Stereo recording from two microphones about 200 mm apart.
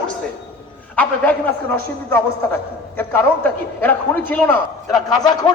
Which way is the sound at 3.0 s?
10° left (ahead or behind).